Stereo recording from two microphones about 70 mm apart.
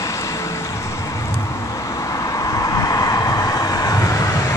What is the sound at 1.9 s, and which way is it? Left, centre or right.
Vehicle, left.